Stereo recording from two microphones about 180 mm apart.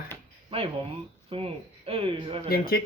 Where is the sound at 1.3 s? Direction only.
30° right (ahead or behind).